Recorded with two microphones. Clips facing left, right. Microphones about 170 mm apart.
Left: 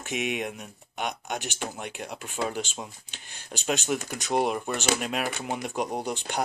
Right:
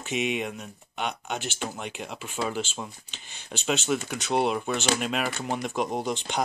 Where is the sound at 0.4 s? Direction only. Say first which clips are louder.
Right 1 dB; 10° left (ahead or behind).